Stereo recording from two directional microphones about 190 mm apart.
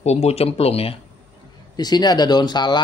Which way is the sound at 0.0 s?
35° left (ahead or behind).